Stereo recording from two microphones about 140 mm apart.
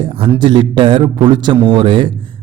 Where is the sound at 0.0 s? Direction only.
40° right (ahead or behind).